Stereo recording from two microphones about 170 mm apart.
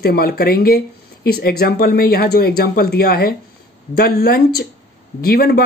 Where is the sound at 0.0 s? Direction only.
65° left (ahead or behind).